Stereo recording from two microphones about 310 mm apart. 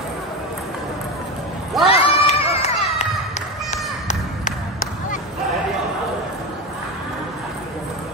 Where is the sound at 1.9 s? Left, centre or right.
Centre.